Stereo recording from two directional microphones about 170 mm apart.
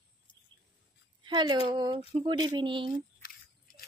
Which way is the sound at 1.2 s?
25° right (ahead or behind).